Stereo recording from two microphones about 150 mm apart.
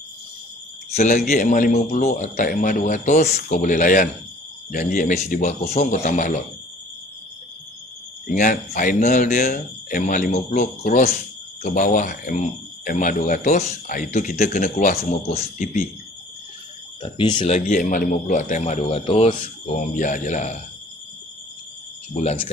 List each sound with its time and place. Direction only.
1.3 s a man's voice: 65° left (ahead or behind); by 3.5 s 45° left (ahead or behind)
3.5 s a man's voice: 60° left (ahead or behind)
8.3 s a man's voice: 60° left (ahead or behind)
17.0 s speech: 30° left (ahead or behind)
17.6 s a man's voice: 65° left (ahead or behind); by 19.5 s 40° left (ahead or behind)
19.7 s a man's voice: 55° left (ahead or behind)
22.1 s a man's voice: 45° left (ahead or behind)